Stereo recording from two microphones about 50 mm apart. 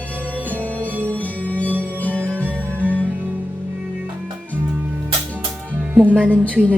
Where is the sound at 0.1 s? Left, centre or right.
Left.